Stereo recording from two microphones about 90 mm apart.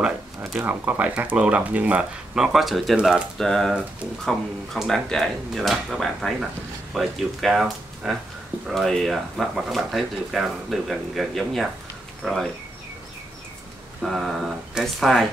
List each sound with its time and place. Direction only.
0.0 s a sound: 10° right (ahead or behind)
0.7 s speech: 20° right (ahead or behind)
2.3 s speech: 5° right (ahead or behind)
3.3 s speech: 5° left (ahead or behind)
14.0 s speech: centre (ahead or behind)